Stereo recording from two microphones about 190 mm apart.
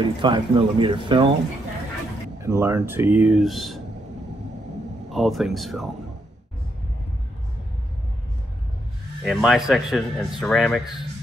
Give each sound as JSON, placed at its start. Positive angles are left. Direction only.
{"t": 0.2, "sound": "speech", "side_deg": -25}
{"t": 2.4, "sound": "speech", "side_deg": -15}
{"t": 5.1, "sound": "speech", "side_deg": 0}
{"t": 9.2, "sound": "speech", "side_deg": 0}